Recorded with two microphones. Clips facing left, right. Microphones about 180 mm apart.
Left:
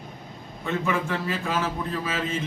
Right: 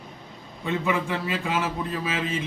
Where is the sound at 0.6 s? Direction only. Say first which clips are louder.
Right 1 dB; 15° right (ahead or behind).